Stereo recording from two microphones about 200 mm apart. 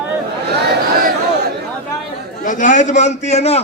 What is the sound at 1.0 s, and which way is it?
Chatter, 55° right (ahead or behind).